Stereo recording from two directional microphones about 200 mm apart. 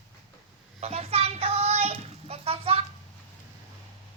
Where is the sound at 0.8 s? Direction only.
30° right (ahead or behind).